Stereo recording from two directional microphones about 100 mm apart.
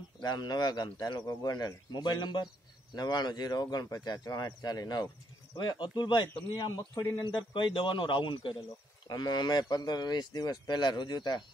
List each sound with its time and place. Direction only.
0.2 s speech: 45° left (ahead or behind)
9.0 s speech: 40° left (ahead or behind)